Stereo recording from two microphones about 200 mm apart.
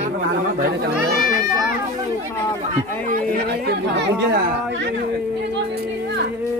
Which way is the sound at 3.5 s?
55° right (ahead or behind).